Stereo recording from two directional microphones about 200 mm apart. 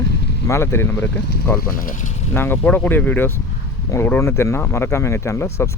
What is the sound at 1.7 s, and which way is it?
Speech, 45° left (ahead or behind).